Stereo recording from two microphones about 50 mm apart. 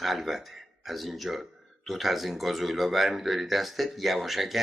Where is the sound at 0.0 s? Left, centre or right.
Centre.